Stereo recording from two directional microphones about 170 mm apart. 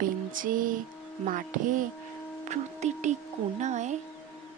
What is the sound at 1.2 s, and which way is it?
Speech, 50° right (ahead or behind).